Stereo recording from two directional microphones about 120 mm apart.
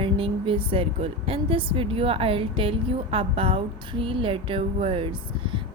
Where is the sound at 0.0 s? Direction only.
50° right (ahead or behind).